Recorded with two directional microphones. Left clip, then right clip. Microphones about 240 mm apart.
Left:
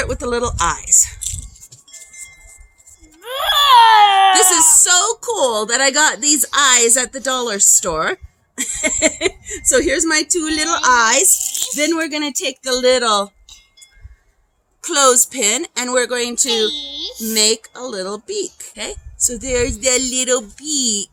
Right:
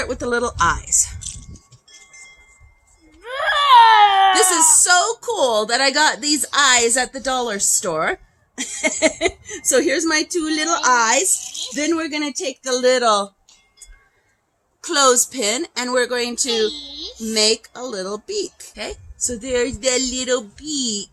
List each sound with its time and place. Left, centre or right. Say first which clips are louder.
0.0 s a woman's voice: left 1 dB; centre
1.2 s a sound: left 6 dB; left
3.2 s baby cry: left 3 dB; centre
4.8 s a woman's voice: left 1 dB; centre
14.8 s a woman's voice: left 2 dB; centre
16.5 s speech: left 4 dB; centre
17.3 s a woman's voice: left 1 dB; centre